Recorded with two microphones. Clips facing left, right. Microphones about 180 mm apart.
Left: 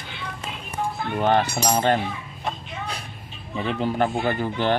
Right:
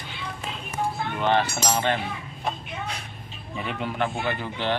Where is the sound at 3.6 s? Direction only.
30° left (ahead or behind).